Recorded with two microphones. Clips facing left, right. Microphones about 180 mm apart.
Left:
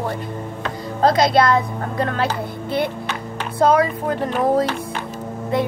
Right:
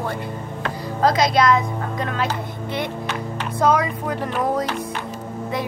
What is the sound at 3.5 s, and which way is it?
Speech, 30° left (ahead or behind).